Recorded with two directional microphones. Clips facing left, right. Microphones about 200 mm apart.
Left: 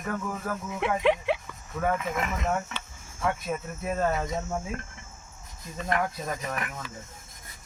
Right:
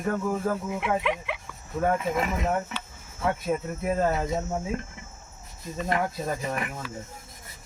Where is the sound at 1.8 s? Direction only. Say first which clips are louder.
Right 3 dB; 30° right (ahead or behind).